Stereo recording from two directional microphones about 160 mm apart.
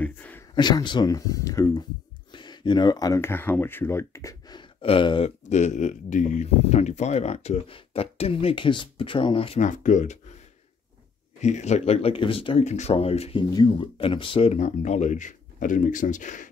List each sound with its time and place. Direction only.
0.0 s a sound: 10° left (ahead or behind)
0.6 s speech: 25° left (ahead or behind)
5.5 s speech: 45° left (ahead or behind)
9.6 s speech: 50° left (ahead or behind)
11.4 s speech: 45° left (ahead or behind)